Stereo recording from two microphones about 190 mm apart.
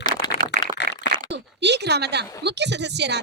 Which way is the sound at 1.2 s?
65° right (ahead or behind).